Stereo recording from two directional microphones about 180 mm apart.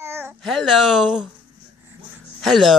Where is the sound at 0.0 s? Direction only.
10° right (ahead or behind).